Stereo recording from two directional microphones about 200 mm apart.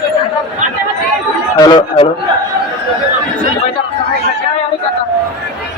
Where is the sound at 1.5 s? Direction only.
20° left (ahead or behind).